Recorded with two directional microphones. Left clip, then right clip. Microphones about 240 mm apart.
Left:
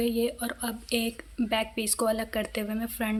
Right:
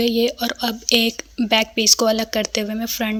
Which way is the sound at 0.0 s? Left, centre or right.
Right.